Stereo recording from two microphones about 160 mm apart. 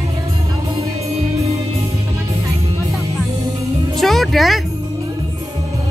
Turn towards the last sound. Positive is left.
turn(degrees=0)  # may be behind; listen again after turning